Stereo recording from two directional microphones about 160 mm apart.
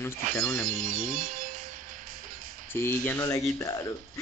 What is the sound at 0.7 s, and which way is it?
Music, 55° right (ahead or behind).